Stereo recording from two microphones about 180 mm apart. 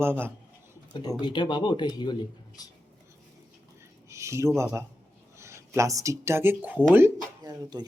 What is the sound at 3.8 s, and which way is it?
Speech, 15° right (ahead or behind).